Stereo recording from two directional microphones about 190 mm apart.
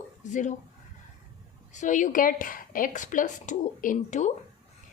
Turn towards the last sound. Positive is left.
turn(degrees=40)  # may be behind; listen again after turning